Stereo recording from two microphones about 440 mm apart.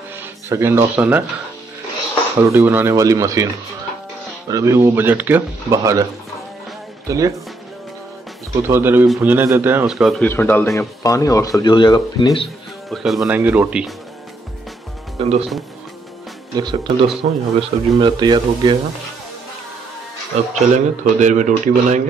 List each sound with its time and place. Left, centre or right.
0.2 s speech: centre
2.3 s speech: centre
4.5 s speech: centre
7.1 s speech: centre
8.6 s speech: centre
15.1 s speech: centre
16.5 s speech: centre
20.5 s speech: centre